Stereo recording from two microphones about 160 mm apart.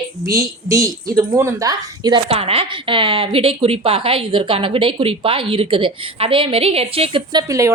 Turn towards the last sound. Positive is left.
turn(degrees=-20)  # may be behind; listen again after turning